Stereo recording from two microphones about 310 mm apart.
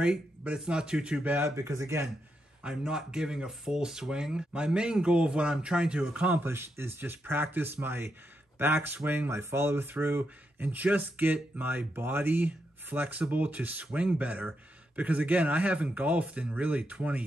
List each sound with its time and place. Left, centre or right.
0.0 s speech: centre